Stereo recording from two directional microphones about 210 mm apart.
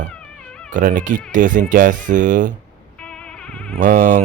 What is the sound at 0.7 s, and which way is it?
Speech, 40° right (ahead or behind).